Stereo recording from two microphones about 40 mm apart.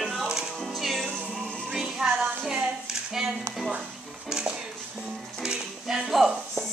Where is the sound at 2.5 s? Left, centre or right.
Centre.